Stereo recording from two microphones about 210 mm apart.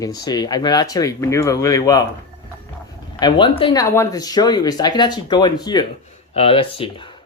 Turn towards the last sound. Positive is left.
turn(degrees=25)  # may be behind; listen again after turning